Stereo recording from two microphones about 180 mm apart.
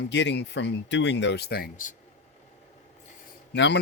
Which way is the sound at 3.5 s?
75° left (ahead or behind).